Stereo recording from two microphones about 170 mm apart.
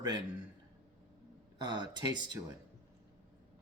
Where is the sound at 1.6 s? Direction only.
25° right (ahead or behind).